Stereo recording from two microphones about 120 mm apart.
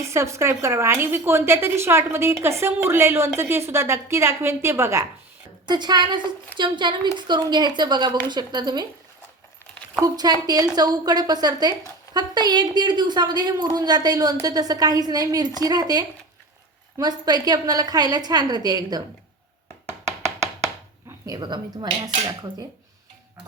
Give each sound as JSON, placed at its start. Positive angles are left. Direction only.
{"t": 0.1, "sound": "a woman's voice", "side_deg": -25}
{"t": 5.6, "sound": "a woman's voice", "side_deg": -35}
{"t": 10.0, "sound": "a woman's voice", "side_deg": -35}
{"t": 19.9, "sound": "a sound", "side_deg": -25}
{"t": 21.2, "sound": "a woman's voice", "side_deg": -35}